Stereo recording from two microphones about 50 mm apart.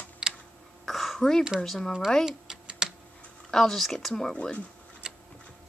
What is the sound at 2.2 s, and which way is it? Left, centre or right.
Typing, centre.